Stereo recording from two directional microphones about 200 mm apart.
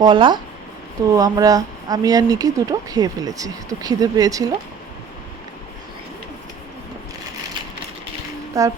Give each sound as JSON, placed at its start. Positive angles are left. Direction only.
{"t": 0.0, "sound": "speech", "side_deg": -25}
{"t": 8.6, "sound": "speech", "side_deg": -15}